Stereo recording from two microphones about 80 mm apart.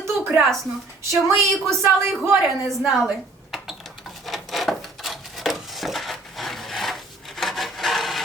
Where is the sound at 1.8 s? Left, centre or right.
Right.